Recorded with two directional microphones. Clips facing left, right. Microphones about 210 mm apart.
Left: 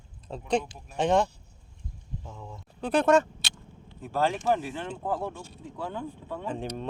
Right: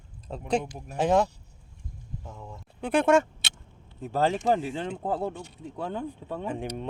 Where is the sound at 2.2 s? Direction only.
5° right (ahead or behind).